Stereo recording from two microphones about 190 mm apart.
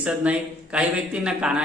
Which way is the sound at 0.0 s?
5° right (ahead or behind).